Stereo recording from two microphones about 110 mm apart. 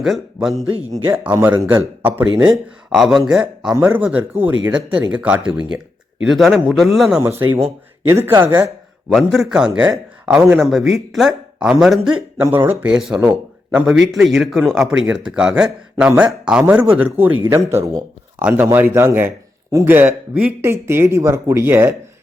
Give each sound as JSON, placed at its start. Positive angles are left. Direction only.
{"t": 0.0, "sound": "speech", "side_deg": 0}
{"t": 1.1, "sound": "speech", "side_deg": -15}
{"t": 2.4, "sound": "speech", "side_deg": -5}
{"t": 3.8, "sound": "speech", "side_deg": -15}
{"t": 7.2, "sound": "a woman's voice", "side_deg": -20}
{"t": 9.0, "sound": "speech", "side_deg": 0}
{"t": 12.4, "sound": "a woman's voice", "side_deg": -20}
{"t": 12.8, "sound": "speech", "side_deg": -10}
{"t": 17.5, "sound": "a woman's voice", "side_deg": -25}
{"t": 18.3, "sound": "a woman's voice", "side_deg": -15}